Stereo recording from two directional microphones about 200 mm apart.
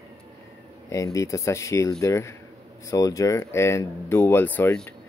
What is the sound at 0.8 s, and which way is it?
Speech, 15° left (ahead or behind).